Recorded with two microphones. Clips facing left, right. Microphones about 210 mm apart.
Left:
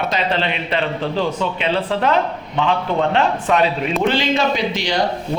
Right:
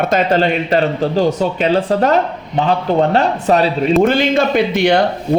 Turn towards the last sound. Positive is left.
turn(degrees=-60)  # may be behind; listen again after turning